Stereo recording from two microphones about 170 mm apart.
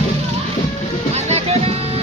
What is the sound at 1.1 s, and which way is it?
Music, 40° right (ahead or behind).